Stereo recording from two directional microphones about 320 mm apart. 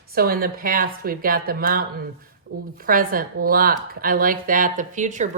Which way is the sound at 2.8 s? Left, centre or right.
Right.